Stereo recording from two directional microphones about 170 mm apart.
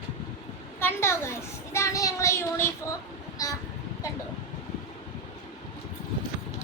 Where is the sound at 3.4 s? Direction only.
20° left (ahead or behind).